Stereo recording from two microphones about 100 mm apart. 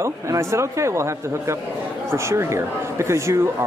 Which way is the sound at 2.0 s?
25° right (ahead or behind).